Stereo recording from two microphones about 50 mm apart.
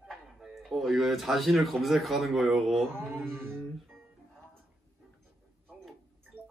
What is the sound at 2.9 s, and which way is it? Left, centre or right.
Music, right.